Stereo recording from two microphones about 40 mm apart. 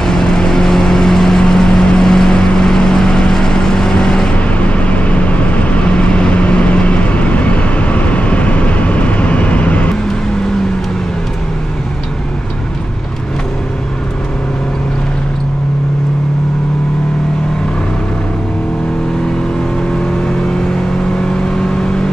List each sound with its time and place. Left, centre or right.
0.0 s vehicle: centre
4.5 s vehicle: left